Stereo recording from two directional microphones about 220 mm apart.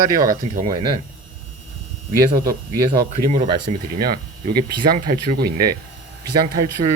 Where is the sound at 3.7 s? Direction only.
30° right (ahead or behind).